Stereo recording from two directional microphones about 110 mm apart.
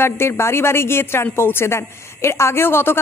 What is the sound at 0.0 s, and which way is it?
A woman's voice, 20° left (ahead or behind).